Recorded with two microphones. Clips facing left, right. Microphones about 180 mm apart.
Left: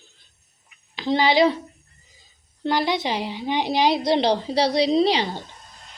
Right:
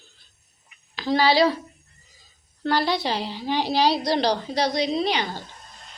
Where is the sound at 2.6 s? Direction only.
15° left (ahead or behind).